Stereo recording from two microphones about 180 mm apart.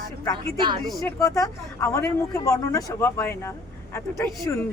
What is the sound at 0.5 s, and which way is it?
Speech, 25° right (ahead or behind).